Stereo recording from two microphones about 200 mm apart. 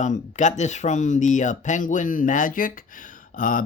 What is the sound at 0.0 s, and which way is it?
Speech, 35° left (ahead or behind).